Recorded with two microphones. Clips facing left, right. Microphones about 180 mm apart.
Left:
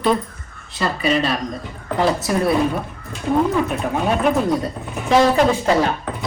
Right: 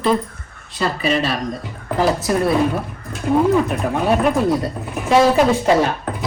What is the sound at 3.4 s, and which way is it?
Speech, centre (ahead or behind).